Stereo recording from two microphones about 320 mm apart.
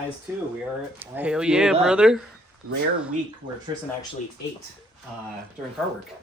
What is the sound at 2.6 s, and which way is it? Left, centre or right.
Speech, right.